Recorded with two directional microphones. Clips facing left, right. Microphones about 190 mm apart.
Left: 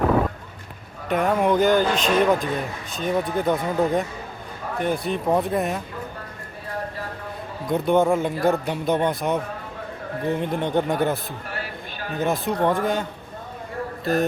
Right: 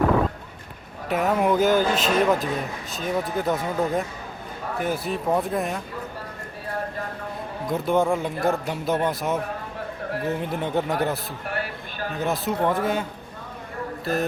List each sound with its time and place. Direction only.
1.0 s speech: 5° right (ahead or behind)
7.7 s speech: centre (ahead or behind)
14.0 s mantra: centre (ahead or behind)